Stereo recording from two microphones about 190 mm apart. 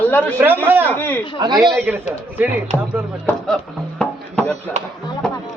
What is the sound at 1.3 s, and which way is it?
Speech, 20° right (ahead or behind).